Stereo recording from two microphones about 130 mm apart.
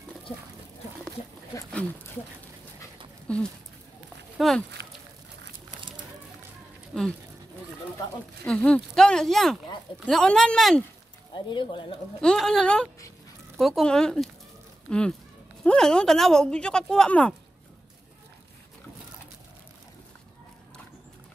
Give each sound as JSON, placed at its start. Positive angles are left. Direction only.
{"t": 3.3, "sound": "speech", "side_deg": 5}
{"t": 6.9, "sound": "speech", "side_deg": 0}
{"t": 8.5, "sound": "speech", "side_deg": 10}
{"t": 11.3, "sound": "speech", "side_deg": 40}
{"t": 12.2, "sound": "speech", "side_deg": 5}